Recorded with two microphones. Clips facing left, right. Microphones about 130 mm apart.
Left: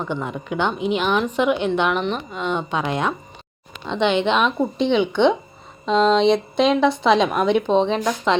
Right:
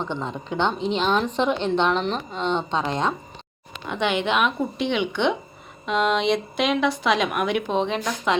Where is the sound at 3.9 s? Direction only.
20° left (ahead or behind).